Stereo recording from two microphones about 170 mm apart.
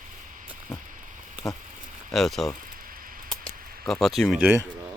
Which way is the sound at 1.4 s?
Centre (ahead or behind).